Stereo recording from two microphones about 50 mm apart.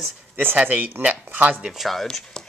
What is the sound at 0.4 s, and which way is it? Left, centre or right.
Speech, right.